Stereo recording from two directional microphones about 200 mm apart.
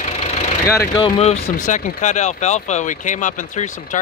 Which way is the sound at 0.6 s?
20° left (ahead or behind).